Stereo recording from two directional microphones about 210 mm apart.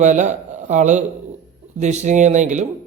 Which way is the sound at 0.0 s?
35° right (ahead or behind).